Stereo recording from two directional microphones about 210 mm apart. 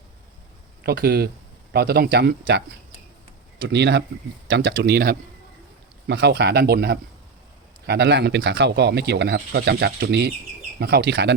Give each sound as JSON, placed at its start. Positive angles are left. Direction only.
{"t": 0.9, "sound": "speech", "side_deg": -50}
{"t": 3.6, "sound": "speech", "side_deg": -55}